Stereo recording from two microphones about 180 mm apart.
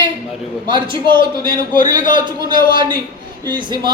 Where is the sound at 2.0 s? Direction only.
45° left (ahead or behind).